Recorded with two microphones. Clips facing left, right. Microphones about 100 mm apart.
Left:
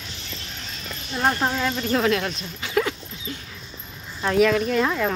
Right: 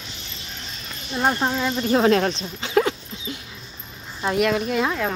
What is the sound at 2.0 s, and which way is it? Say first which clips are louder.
Dog: right 4 dB; 30° right (ahead or behind).